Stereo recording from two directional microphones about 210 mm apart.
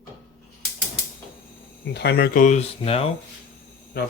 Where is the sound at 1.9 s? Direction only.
50° left (ahead or behind); by 3.1 s 25° left (ahead or behind).